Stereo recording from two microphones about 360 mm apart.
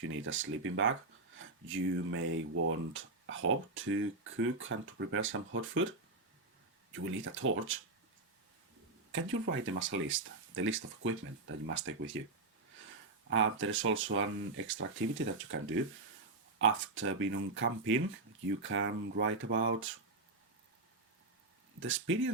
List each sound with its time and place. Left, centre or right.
0.0 s speech: right
6.9 s speech: right
9.1 s speech: right
13.3 s speech: right
21.8 s speech: right